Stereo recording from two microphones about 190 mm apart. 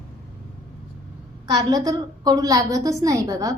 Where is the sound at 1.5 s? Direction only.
20° right (ahead or behind).